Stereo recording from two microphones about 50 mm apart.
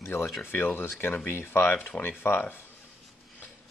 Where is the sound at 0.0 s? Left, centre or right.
Left.